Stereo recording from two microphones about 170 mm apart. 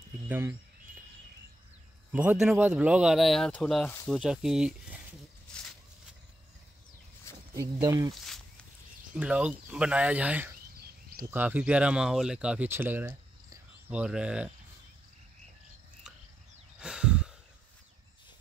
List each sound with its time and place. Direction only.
0.3 s speech: 10° right (ahead or behind)
2.1 s speech: 5° right (ahead or behind)
7.5 s speech: 20° right (ahead or behind)
9.1 s speech: 5° right (ahead or behind)
16.8 s sigh: 5° right (ahead or behind)